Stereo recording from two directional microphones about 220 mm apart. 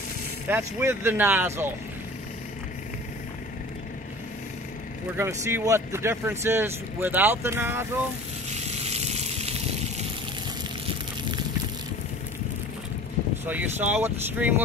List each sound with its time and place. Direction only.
0.5 s speech: 10° right (ahead or behind)
5.1 s speech: 10° right (ahead or behind)
8.5 s a sound: 30° right (ahead or behind)
13.5 s speech: 5° right (ahead or behind)